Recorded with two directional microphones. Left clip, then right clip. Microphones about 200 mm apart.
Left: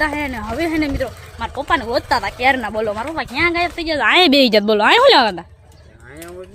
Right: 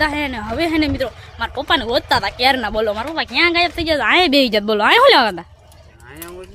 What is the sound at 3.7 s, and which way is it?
Speech, 30° right (ahead or behind).